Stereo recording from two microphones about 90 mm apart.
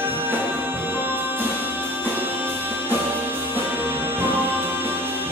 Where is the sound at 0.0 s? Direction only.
25° right (ahead or behind).